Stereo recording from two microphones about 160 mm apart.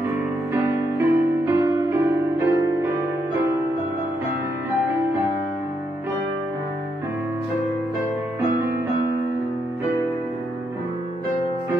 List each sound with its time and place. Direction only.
0.5 s music: 20° right (ahead or behind)